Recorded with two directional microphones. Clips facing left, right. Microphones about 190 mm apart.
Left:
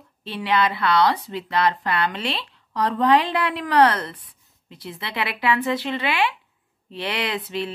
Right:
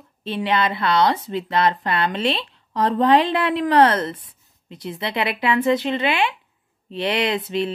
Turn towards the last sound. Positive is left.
turn(degrees=-25)  # may be behind; listen again after turning